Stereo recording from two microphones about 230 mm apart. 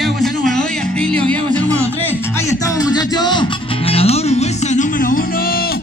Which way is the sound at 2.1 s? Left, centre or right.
Centre.